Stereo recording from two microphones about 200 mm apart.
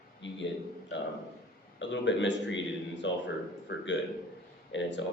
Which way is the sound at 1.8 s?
65° left (ahead or behind).